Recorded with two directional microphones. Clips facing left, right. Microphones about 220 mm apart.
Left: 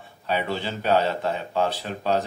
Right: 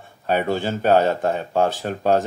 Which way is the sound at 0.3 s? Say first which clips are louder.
Right 6 dB; 50° right (ahead or behind).